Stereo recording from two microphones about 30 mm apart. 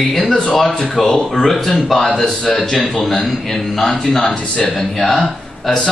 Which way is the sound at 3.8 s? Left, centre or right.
Left.